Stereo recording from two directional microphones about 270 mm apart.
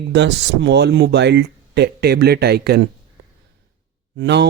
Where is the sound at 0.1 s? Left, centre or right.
Right.